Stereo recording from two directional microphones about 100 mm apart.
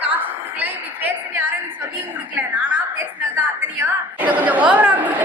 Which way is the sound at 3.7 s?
15° right (ahead or behind).